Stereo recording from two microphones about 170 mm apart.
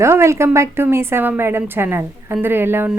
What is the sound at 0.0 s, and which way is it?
A woman's voice, 15° right (ahead or behind).